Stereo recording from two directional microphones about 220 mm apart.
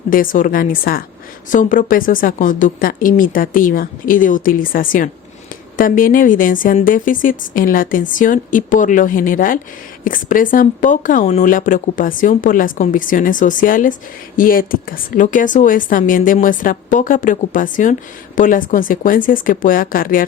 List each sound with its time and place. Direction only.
0.1 s speech: 40° left (ahead or behind)